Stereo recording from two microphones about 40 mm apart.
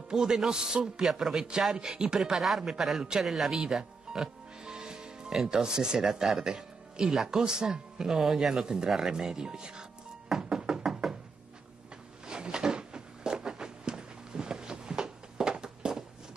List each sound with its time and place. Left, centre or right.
0.1 s a man's voice: centre
1.1 s a man's voice: centre
2.1 s speech: centre
4.2 s music: centre
5.5 s speech: centre
10.3 s music: centre
12.3 s a sound: centre